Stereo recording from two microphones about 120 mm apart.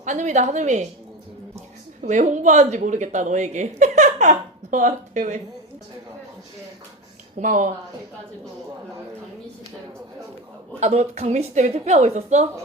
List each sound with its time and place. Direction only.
0.0 s a woman's voice: 90° right
2.0 s speech: 85° right
7.3 s speech: 90° right
10.8 s a woman's voice: 70° right (ahead or behind)